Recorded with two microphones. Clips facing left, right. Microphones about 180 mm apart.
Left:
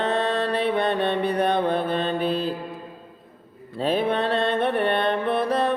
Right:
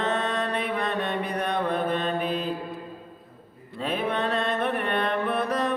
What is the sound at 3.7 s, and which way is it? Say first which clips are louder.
Mantra: left 5 dB; 30° left (ahead or behind).